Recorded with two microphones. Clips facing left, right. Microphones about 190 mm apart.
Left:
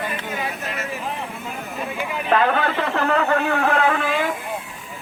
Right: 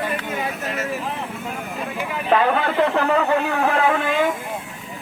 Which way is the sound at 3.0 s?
15° right (ahead or behind).